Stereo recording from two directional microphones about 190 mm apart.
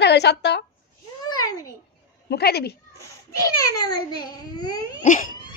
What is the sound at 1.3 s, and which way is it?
Babbling, 20° left (ahead or behind).